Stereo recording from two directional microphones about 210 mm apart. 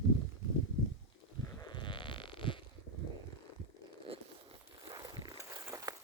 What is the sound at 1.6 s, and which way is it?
Sheep, 20° left (ahead or behind).